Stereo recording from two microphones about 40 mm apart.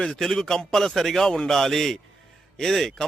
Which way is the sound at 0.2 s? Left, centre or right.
Centre.